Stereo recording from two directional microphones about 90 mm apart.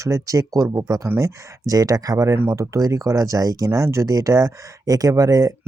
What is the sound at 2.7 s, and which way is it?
Speech, 35° right (ahead or behind).